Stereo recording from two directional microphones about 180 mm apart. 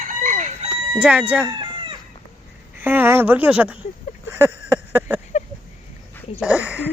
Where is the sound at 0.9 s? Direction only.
5° right (ahead or behind).